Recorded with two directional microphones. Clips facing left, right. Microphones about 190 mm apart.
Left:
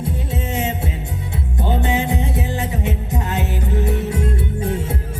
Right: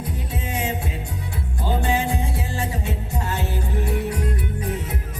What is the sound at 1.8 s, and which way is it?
Music, 20° left (ahead or behind).